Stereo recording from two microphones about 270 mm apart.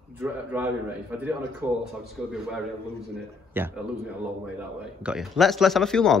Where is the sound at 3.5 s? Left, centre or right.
Centre.